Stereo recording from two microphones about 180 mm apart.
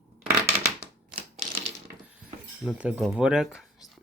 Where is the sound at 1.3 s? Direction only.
35° right (ahead or behind).